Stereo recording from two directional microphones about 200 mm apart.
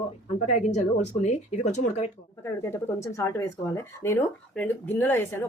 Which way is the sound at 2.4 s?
15° left (ahead or behind).